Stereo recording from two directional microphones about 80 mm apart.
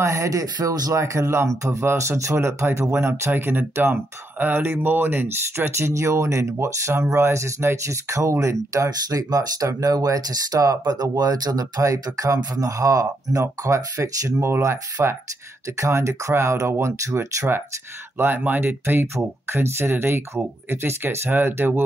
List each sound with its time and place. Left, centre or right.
0.0 s speech: right